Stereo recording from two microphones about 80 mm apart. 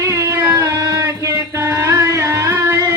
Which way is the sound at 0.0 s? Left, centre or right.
Right.